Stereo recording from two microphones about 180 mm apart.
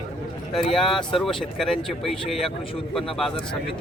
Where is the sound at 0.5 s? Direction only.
Centre (ahead or behind).